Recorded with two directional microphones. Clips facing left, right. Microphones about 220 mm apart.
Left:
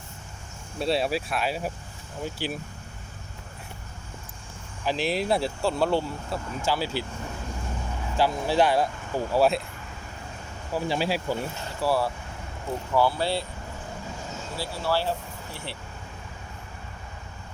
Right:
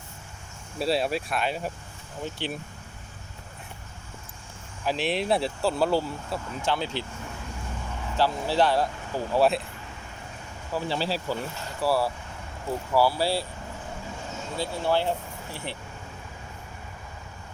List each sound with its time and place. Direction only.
0.8 s speech: centre (ahead or behind)
4.9 s speech: centre (ahead or behind)
8.1 s speech: 15° left (ahead or behind)
9.3 s speech: centre (ahead or behind)
10.7 s speech: 10° left (ahead or behind)
11.8 s speech: 5° right (ahead or behind)
14.5 s speech: 20° right (ahead or behind)